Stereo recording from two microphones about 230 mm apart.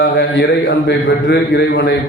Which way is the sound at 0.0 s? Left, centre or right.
Left.